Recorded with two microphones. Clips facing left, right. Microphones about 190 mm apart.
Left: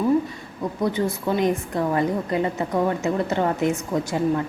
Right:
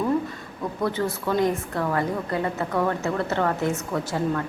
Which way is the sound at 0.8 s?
15° left (ahead or behind).